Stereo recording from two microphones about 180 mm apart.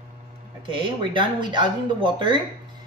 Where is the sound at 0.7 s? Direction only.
25° right (ahead or behind).